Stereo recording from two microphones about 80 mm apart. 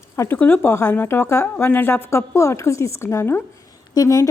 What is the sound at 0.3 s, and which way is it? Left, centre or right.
A woman's voice, left.